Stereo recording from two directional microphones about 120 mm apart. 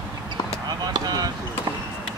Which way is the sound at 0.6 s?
35° right (ahead or behind).